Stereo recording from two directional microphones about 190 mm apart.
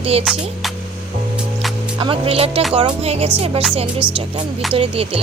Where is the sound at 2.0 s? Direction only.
30° right (ahead or behind).